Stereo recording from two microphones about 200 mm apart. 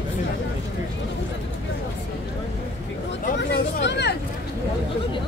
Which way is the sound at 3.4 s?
60° left (ahead or behind).